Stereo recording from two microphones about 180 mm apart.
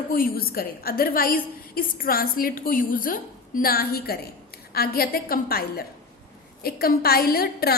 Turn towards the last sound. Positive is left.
turn(degrees=60)  # may be behind; listen again after turning